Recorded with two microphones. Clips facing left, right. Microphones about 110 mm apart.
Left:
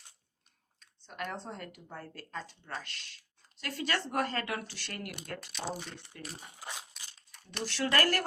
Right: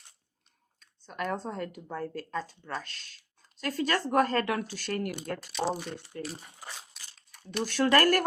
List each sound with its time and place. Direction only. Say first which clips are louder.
0.8 s speech: right 5 dB; 45° right (ahead or behind)
5.4 s speech: right 10 dB; centre (ahead or behind)
6.1 s speech: right 10 dB; 35° right (ahead or behind)
6.9 s a sound: even; centre (ahead or behind)
7.6 s speech: right 6 dB; 45° right (ahead or behind)